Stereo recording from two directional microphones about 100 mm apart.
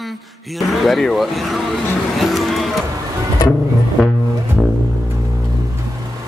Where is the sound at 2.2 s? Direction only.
Centre (ahead or behind).